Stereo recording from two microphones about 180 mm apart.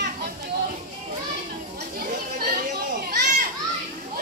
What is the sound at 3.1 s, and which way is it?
Children playing, 50° right (ahead or behind).